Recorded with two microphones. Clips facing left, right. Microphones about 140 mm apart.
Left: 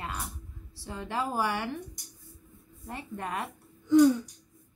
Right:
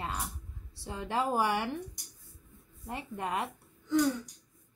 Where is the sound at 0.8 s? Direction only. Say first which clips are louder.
Right 1 dB; 20° right (ahead or behind).